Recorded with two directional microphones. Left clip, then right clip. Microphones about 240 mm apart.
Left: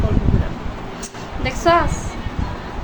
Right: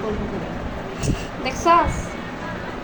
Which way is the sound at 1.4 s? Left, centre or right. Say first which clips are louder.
Left 1 dB; centre.